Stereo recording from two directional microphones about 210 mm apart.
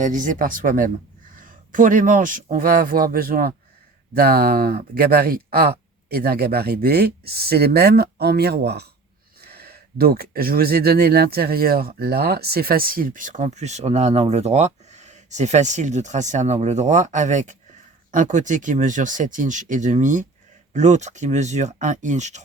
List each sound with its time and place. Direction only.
0.0 s speech: 40° right (ahead or behind)